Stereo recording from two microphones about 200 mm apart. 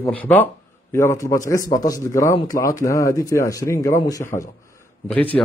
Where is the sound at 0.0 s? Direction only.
10° left (ahead or behind).